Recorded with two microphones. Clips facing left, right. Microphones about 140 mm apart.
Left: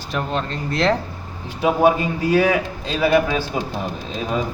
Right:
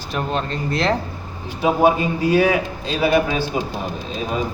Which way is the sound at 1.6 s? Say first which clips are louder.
Even; 25° right (ahead or behind).